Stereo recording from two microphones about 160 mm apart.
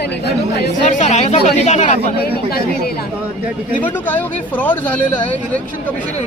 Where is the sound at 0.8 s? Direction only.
50° left (ahead or behind).